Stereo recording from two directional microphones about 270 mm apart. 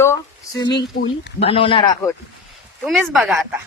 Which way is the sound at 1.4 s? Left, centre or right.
Centre.